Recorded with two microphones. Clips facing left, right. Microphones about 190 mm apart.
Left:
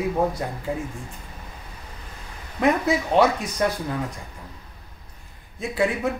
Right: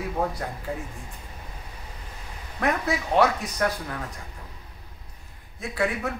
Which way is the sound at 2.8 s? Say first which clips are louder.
Left 3 dB; 25° left (ahead or behind).